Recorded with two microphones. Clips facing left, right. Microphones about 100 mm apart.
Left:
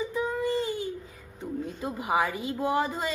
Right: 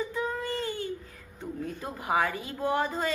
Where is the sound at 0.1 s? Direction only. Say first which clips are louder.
Left 4 dB; 10° left (ahead or behind).